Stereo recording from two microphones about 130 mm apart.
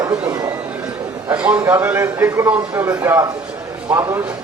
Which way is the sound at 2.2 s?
25° right (ahead or behind).